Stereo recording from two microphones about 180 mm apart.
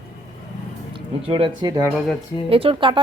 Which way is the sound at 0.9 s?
30° right (ahead or behind).